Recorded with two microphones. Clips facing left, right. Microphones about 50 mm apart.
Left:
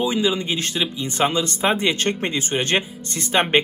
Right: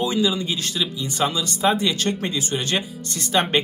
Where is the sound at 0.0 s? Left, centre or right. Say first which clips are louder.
Left 1 dB; left.